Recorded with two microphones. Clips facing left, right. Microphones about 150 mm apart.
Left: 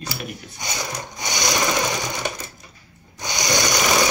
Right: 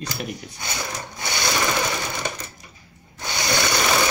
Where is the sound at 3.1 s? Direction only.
15° left (ahead or behind).